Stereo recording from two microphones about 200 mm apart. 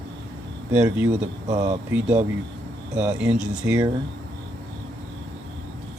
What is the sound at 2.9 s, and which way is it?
Speech, 5° right (ahead or behind).